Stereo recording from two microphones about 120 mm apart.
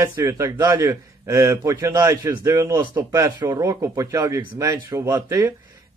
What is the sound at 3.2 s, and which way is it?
A man's voice, 25° right (ahead or behind).